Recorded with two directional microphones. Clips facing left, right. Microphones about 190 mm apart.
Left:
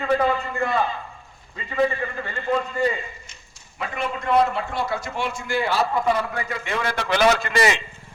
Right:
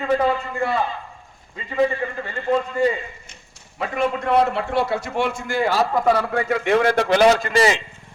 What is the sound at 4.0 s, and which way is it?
A man's voice, 65° right (ahead or behind).